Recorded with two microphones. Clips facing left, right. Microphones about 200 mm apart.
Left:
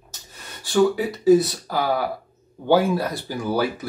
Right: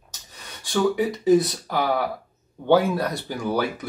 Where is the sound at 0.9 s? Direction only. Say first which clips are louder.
Left 2 dB; 5° left (ahead or behind).